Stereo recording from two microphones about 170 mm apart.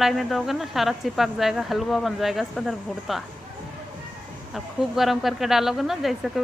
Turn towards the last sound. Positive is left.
turn(degrees=0)  # may be behind; listen again after turning